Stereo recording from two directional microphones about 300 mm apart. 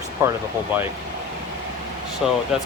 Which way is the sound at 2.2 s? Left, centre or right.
Centre.